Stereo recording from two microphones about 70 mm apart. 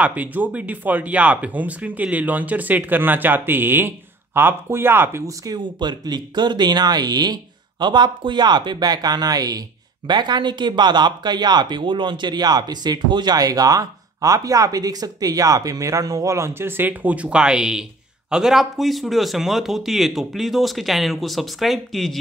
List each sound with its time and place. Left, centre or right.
0.0 s speech: right
5.2 s speech: right
5.6 s speech: right
7.8 s speech: right
10.0 s speech: right; by 22.1 s centre